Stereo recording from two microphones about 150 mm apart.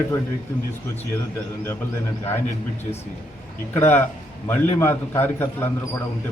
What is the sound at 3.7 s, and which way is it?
A man's voice, 15° left (ahead or behind).